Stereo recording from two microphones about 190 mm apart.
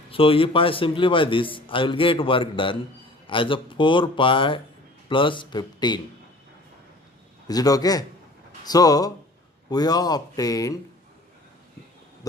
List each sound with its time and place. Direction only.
0.1 s a man's voice: 30° left (ahead or behind)
7.4 s a man's voice: 20° left (ahead or behind)